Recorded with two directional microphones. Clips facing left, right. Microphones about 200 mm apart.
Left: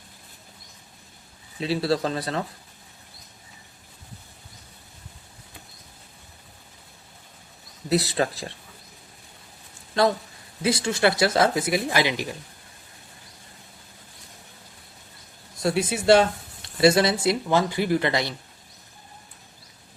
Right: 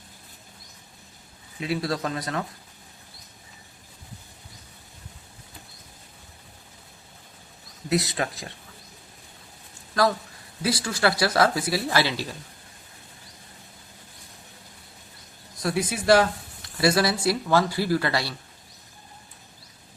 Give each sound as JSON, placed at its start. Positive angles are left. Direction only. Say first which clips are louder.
{"t": 1.5, "sound": "speech", "louder": "left 4 dB", "side_deg": 30}
{"t": 7.9, "sound": "speech", "louder": "left 3 dB", "side_deg": 35}
{"t": 10.6, "sound": "speech", "louder": "left 2 dB", "side_deg": 25}
{"t": 15.5, "sound": "speech", "louder": "left 3 dB", "side_deg": 25}